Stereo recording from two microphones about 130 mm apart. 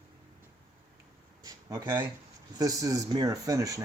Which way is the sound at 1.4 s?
30° right (ahead or behind).